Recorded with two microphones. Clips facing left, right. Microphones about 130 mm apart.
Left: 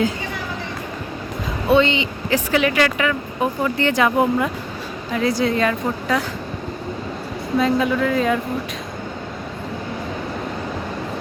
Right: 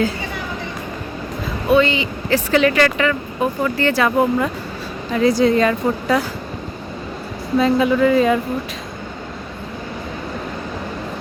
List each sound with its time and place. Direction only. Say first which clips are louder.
1.7 s speech: right 1 dB; 25° left (ahead or behind)
2.5 s speech: right 3 dB; 10° left (ahead or behind)
5.1 s a woman's voice: right 5 dB; centre (ahead or behind)
7.6 s a woman's voice: right 4 dB; centre (ahead or behind)